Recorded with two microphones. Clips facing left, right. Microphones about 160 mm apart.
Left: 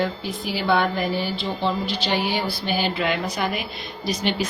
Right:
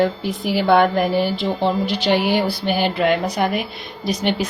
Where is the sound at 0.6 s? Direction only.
60° right (ahead or behind).